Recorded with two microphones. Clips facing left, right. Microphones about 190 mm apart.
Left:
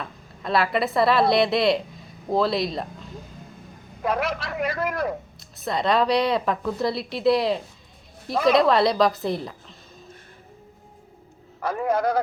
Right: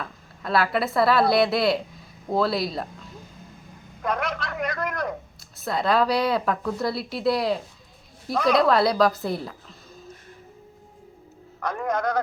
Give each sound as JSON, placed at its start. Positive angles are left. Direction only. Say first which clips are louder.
{"t": 0.0, "sound": "a woman's voice", "louder": "left 1 dB", "side_deg": 0}
{"t": 4.0, "sound": "speech", "louder": "left 2 dB", "side_deg": 5}
{"t": 11.6, "sound": "a man's voice", "louder": "left 3 dB", "side_deg": 5}